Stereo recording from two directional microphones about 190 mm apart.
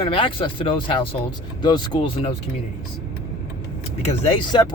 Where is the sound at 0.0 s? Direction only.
25° left (ahead or behind).